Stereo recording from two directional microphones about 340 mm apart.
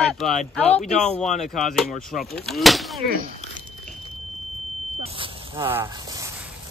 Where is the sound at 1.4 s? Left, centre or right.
Centre.